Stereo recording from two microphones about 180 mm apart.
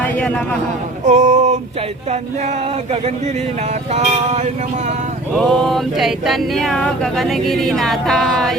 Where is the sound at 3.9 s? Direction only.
40° right (ahead or behind).